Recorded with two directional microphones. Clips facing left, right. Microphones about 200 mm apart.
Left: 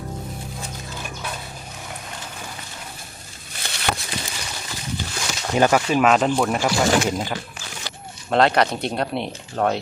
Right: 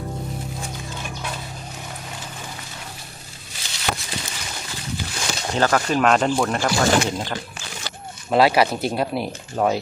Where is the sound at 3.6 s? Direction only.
60° left (ahead or behind).